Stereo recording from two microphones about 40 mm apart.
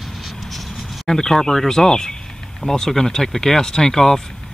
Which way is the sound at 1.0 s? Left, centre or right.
Centre.